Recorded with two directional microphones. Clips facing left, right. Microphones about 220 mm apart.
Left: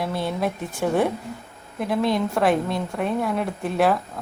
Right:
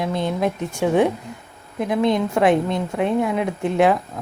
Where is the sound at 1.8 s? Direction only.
20° right (ahead or behind).